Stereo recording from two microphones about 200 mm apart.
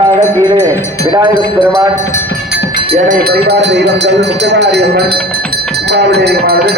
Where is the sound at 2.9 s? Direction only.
55° right (ahead or behind).